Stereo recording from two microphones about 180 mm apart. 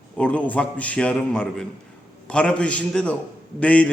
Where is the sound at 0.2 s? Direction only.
5° left (ahead or behind).